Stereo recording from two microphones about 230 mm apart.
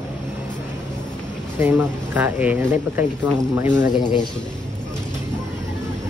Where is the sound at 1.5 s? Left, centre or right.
Centre.